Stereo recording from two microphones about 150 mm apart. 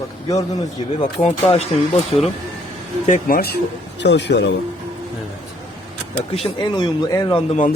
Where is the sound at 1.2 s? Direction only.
45° left (ahead or behind).